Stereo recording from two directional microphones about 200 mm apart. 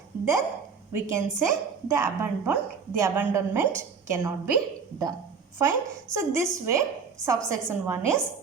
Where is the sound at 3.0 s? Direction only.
15° right (ahead or behind).